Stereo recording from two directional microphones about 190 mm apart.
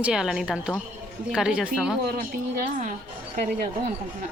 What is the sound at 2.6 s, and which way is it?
A woman's voice, 45° right (ahead or behind).